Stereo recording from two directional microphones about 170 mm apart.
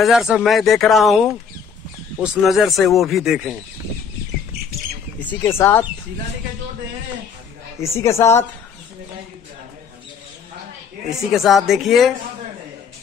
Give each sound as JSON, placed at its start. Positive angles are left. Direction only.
{"t": 0.0, "sound": "speech", "side_deg": 0}
{"t": 5.2, "sound": "a woman's voice", "side_deg": 10}
{"t": 7.8, "sound": "a woman's voice", "side_deg": 15}
{"t": 11.1, "sound": "speech", "side_deg": 0}